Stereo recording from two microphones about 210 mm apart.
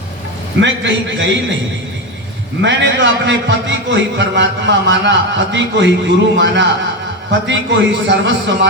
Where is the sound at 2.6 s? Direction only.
60° right (ahead or behind).